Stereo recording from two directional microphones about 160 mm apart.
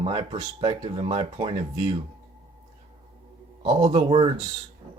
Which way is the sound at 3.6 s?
45° right (ahead or behind).